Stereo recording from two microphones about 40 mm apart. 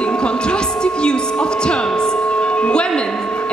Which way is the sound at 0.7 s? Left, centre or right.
Left.